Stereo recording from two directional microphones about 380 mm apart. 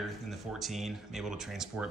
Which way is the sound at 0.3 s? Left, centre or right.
Centre.